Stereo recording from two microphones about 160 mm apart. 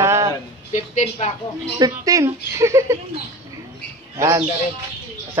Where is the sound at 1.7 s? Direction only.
25° right (ahead or behind).